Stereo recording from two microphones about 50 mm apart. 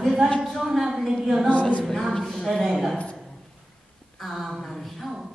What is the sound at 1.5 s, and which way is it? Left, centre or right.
Speech, left.